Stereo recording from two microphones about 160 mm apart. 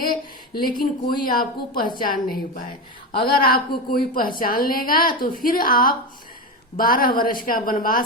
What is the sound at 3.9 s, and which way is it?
A woman's voice, 60° left (ahead or behind).